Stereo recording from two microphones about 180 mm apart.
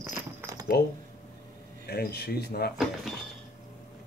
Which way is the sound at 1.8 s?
60° left (ahead or behind).